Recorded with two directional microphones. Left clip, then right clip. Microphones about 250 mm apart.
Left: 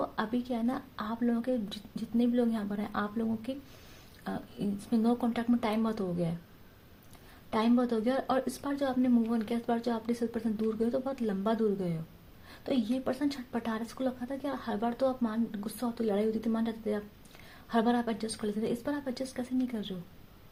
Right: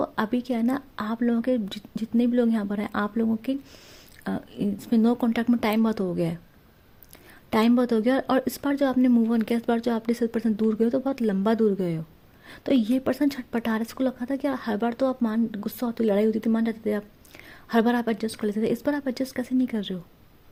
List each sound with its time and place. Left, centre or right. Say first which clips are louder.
0.0 s a sound: right 7 dB; right
0.5 s speech: right 7 dB; right
7.5 s speech: right 7 dB; right